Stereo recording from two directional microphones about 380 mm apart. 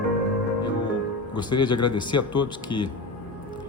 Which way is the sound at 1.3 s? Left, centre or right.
Centre.